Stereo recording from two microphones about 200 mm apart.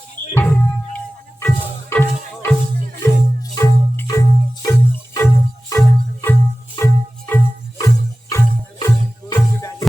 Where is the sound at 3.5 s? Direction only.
15° left (ahead or behind).